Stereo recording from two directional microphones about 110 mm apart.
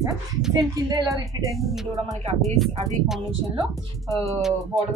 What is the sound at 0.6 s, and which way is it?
Speech, 35° right (ahead or behind).